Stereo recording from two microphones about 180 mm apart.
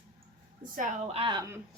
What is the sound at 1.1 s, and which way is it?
Speech, 25° right (ahead or behind).